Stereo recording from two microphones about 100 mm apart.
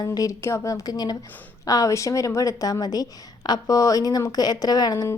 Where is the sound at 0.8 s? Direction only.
40° left (ahead or behind).